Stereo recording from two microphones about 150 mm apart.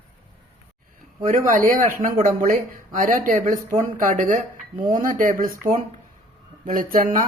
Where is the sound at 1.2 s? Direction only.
65° right (ahead or behind).